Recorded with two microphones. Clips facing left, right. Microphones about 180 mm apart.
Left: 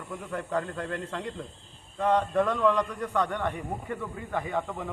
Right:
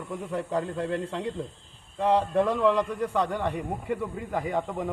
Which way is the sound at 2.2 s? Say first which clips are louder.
Right 1 dB; 30° right (ahead or behind).